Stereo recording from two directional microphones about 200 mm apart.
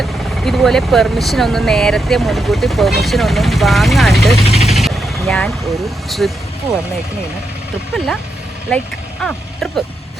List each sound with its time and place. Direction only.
0.0 s speech: centre (ahead or behind)
4.4 s vehicle: 30° left (ahead or behind)
4.7 s vehicle: centre (ahead or behind)
6.1 s speech: centre (ahead or behind)
7.9 s speech: centre (ahead or behind)
9.2 s speech: centre (ahead or behind)